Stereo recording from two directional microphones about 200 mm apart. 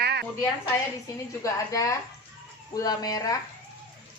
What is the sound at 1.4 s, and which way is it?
A woman's voice, 15° left (ahead or behind).